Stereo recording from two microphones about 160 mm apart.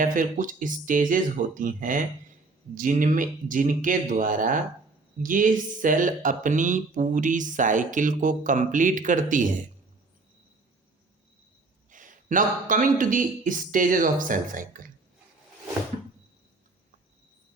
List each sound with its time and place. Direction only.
0.0 s speech: 55° right (ahead or behind)
11.9 s speech: 55° right (ahead or behind)